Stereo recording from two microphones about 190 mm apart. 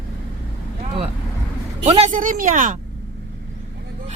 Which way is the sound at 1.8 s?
35° right (ahead or behind).